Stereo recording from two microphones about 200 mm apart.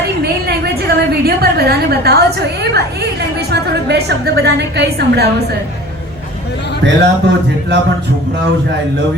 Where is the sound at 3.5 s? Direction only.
55° right (ahead or behind).